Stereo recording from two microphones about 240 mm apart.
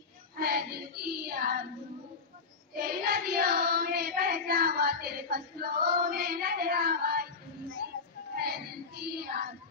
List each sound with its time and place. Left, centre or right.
0.4 s child singing: right
2.7 s child singing: right
8.4 s child singing: right